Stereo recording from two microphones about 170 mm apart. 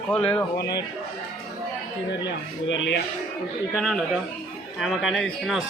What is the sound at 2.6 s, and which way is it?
Speech, 90° left.